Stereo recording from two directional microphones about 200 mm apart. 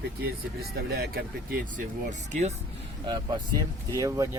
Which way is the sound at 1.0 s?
50° right (ahead or behind).